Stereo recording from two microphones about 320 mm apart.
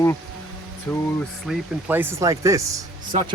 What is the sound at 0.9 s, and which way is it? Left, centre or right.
Speech, centre.